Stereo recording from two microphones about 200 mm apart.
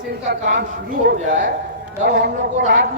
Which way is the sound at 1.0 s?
40° right (ahead or behind).